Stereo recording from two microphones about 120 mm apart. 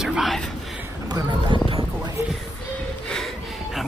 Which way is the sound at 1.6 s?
45° right (ahead or behind).